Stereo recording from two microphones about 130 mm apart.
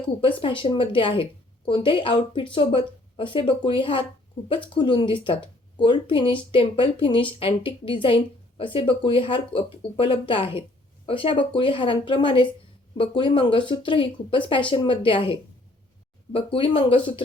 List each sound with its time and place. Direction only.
0.2 s speech: 40° left (ahead or behind)